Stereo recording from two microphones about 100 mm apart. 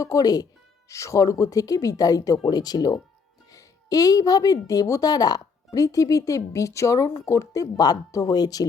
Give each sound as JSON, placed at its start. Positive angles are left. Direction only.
{"t": 0.0, "sound": "a woman's voice", "side_deg": 35}